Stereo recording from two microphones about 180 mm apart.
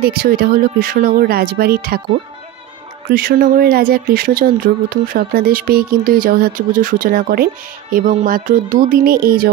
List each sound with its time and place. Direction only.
0.0 s speech: 55° right (ahead or behind)
3.1 s speech: 55° right (ahead or behind)
7.9 s speech: 40° right (ahead or behind)